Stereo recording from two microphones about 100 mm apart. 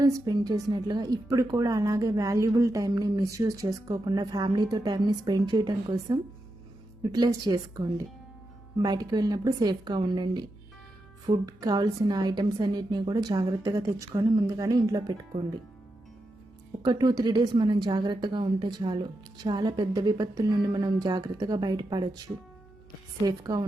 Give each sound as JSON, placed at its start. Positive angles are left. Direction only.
{"t": 0.0, "sound": "a woman's voice", "side_deg": -40}
{"t": 11.4, "sound": "a woman's voice", "side_deg": -40}
{"t": 16.8, "sound": "a woman's voice", "side_deg": -45}
{"t": 23.2, "sound": "a woman's voice", "side_deg": -40}